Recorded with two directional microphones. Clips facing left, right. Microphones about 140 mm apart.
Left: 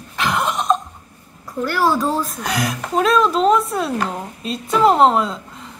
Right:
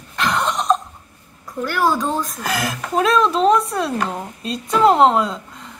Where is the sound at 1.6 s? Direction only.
Centre (ahead or behind).